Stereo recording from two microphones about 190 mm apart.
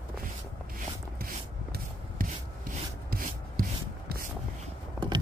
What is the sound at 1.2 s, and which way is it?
Rub, 50° right (ahead or behind).